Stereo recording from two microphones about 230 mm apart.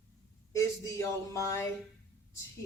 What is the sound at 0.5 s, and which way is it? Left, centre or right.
Speech, centre.